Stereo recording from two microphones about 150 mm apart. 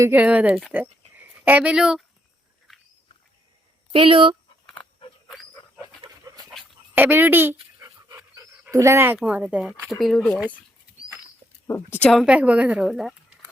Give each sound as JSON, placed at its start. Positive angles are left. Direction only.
{"t": 0.0, "sound": "a woman's voice", "side_deg": -10}
{"t": 3.9, "sound": "speech", "side_deg": -35}
{"t": 4.6, "sound": "a sound", "side_deg": 5}
{"t": 6.9, "sound": "a woman's voice", "side_deg": -15}
{"t": 7.5, "sound": "dog", "side_deg": -25}
{"t": 8.7, "sound": "speech", "side_deg": -20}
{"t": 11.7, "sound": "a woman's voice", "side_deg": 10}
{"t": 12.2, "sound": "a woman's voice", "side_deg": -10}